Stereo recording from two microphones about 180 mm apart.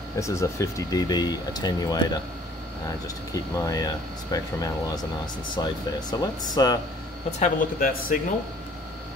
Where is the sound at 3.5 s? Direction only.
20° left (ahead or behind).